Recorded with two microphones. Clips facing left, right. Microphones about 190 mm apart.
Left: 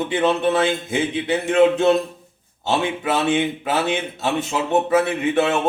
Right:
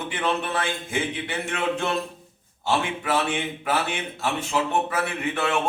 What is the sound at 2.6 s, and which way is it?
Speech, 20° left (ahead or behind).